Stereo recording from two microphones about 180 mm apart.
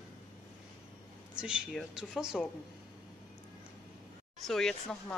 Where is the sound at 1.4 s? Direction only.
Centre (ahead or behind).